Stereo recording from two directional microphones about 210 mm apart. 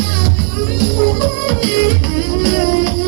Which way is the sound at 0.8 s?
5° left (ahead or behind).